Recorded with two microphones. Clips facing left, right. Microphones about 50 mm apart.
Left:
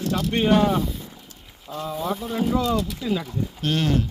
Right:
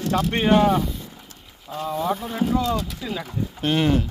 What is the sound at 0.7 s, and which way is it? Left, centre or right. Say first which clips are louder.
Speech: right 2 dB; centre.